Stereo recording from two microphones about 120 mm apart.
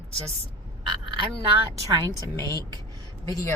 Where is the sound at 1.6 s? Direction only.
35° right (ahead or behind).